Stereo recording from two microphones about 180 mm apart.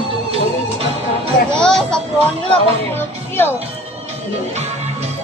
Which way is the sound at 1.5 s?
5° left (ahead or behind).